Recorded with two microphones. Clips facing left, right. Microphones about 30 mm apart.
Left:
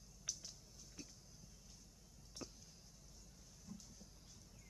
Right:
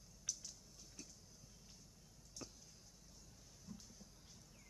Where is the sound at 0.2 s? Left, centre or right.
Centre.